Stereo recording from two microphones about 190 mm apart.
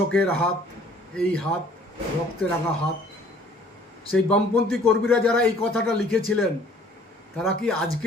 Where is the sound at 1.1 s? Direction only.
5° left (ahead or behind).